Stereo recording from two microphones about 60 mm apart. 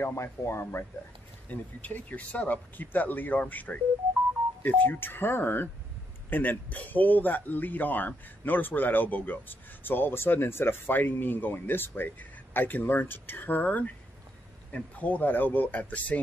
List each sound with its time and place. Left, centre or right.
0.0 s speech: left
1.5 s speech: left